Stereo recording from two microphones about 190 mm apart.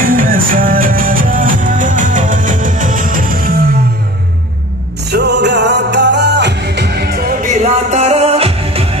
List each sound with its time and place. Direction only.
0.0 s music: 45° right (ahead or behind)
5.1 s music: 60° right (ahead or behind)
7.6 s music: 35° right (ahead or behind)